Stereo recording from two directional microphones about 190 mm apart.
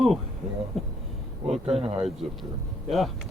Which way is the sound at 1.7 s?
30° right (ahead or behind).